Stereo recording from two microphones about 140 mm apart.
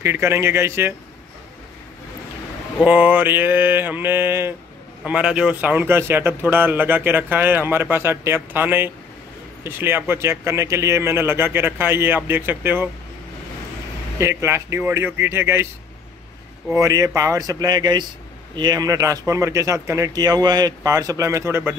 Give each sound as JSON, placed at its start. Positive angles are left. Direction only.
{"t": 0.0, "sound": "a man's voice", "side_deg": -20}
{"t": 2.8, "sound": "a man's voice", "side_deg": -10}
{"t": 14.1, "sound": "a man's voice", "side_deg": -20}
{"t": 16.8, "sound": "speech", "side_deg": -25}